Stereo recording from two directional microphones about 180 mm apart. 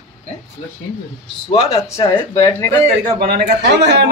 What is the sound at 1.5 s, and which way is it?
Speech, 20° left (ahead or behind).